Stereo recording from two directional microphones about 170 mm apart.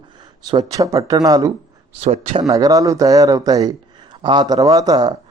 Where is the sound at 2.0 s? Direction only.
40° right (ahead or behind).